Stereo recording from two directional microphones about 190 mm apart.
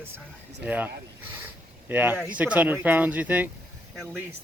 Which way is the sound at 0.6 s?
10° right (ahead or behind).